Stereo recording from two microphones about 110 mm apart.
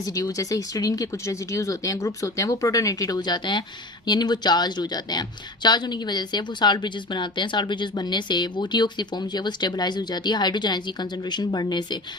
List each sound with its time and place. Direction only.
0.0 s a woman's voice: 35° left (ahead or behind)